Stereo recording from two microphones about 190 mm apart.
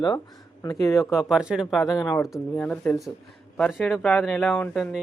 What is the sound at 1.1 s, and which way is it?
Speech, 5° right (ahead or behind).